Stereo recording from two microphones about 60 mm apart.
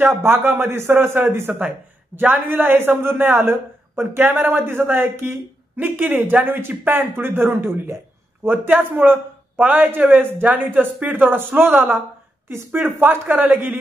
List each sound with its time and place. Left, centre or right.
0.2 s a woman's voice: right